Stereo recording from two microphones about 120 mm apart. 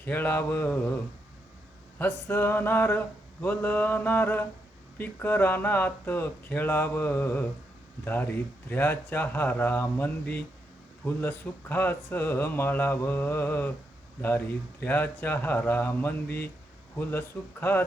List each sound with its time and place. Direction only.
0.0 s speech: 15° left (ahead or behind)
2.0 s speech: 15° left (ahead or behind)